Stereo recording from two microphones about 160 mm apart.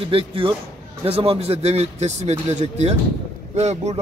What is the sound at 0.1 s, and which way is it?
Speech, 35° right (ahead or behind).